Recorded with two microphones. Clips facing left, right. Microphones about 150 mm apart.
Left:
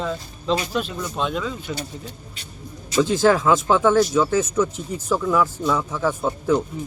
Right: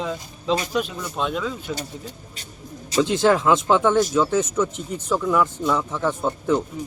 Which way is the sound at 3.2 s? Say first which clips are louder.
Even; centre (ahead or behind).